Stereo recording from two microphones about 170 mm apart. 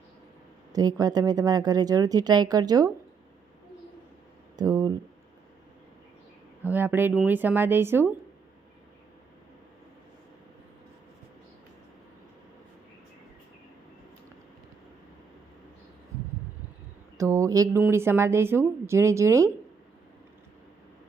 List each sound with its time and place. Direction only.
0.7 s speech: 20° right (ahead or behind)
4.5 s speech: 20° right (ahead or behind)
6.6 s speech: 10° right (ahead or behind)
17.2 s speech: 20° right (ahead or behind)